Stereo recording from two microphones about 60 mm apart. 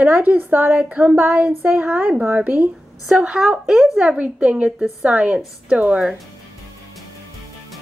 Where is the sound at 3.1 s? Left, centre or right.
Centre.